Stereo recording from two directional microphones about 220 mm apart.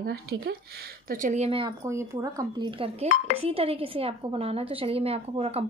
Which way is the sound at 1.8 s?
15° right (ahead or behind).